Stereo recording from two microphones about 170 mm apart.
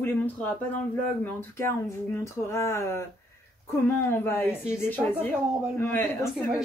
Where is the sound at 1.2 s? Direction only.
15° left (ahead or behind).